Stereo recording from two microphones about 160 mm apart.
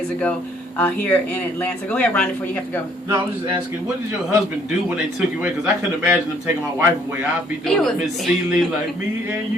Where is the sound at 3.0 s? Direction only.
25° right (ahead or behind).